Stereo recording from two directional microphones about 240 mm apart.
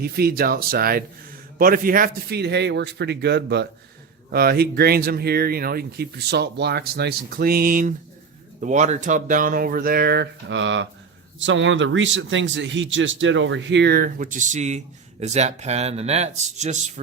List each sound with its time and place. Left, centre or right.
0.0 s a man's voice: right